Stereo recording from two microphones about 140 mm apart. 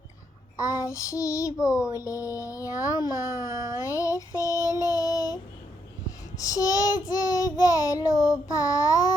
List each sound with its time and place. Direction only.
0.6 s child singing: 20° left (ahead or behind)
3.4 s a child's voice: 20° right (ahead or behind)
3.8 s child singing: 25° left (ahead or behind)